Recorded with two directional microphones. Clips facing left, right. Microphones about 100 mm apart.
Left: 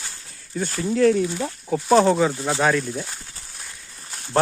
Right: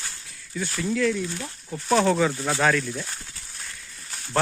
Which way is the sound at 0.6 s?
40° left (ahead or behind).